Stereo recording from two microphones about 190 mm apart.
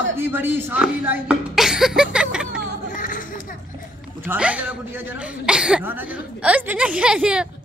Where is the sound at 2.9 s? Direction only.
45° left (ahead or behind).